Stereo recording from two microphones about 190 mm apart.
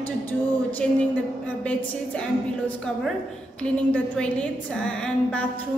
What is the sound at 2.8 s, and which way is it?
A woman's voice, centre (ahead or behind).